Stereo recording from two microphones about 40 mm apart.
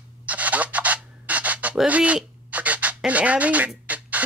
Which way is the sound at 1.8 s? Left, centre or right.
Right.